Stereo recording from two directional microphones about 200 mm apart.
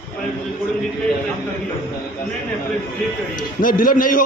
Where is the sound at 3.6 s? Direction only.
45° left (ahead or behind).